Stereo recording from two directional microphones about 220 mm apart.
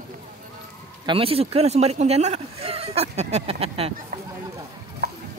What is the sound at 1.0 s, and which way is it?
Speech, 25° right (ahead or behind).